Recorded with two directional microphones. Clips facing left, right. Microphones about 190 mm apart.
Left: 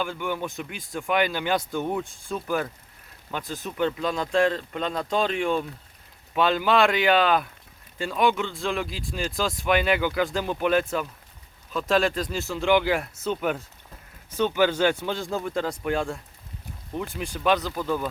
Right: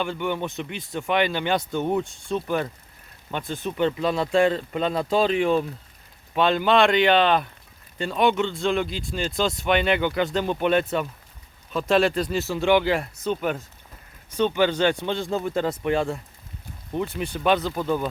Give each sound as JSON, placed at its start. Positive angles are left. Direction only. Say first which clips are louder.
{"t": 0.0, "sound": "speech", "louder": "right 2 dB", "side_deg": 0}
{"t": 17.7, "sound": "speech", "louder": "right 2 dB", "side_deg": -20}